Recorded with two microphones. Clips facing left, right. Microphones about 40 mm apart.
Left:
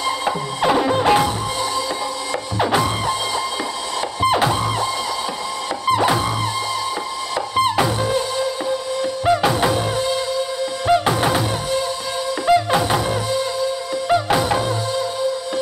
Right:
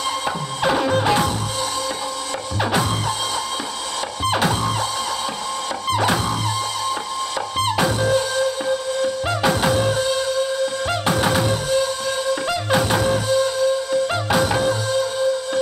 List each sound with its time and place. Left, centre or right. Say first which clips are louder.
0.6 s music: left 1 dB; centre
1.0 s music: left 3 dB; centre
4.4 s music: left 2 dB; centre
7.5 s music: left 3 dB; centre
12.4 s music: left 7 dB; centre